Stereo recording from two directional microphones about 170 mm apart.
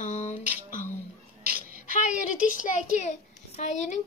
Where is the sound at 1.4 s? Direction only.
60° right (ahead or behind).